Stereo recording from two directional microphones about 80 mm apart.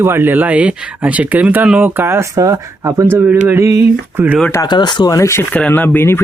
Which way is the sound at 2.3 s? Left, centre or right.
Right.